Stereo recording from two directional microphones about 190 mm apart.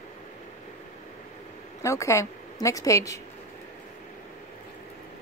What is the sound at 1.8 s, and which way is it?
A woman's voice, 15° left (ahead or behind).